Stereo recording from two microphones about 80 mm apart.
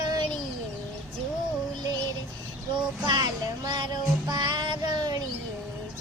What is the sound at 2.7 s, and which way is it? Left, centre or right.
Child singing, right.